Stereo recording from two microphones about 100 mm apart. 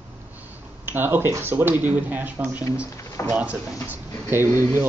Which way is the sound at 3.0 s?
30° left (ahead or behind).